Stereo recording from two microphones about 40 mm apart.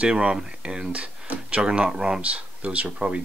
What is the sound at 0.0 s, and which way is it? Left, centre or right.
Speech, right.